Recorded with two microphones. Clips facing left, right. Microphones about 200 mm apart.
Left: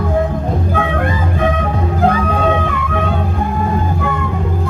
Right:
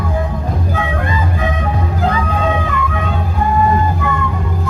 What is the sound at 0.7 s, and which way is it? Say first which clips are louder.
Music: left 2 dB; 55° left (ahead or behind).